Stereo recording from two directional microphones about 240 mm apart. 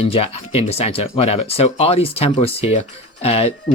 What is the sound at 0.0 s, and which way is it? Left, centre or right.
Speech, left.